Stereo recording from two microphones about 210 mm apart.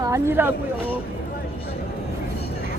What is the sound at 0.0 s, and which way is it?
Speech, 15° right (ahead or behind).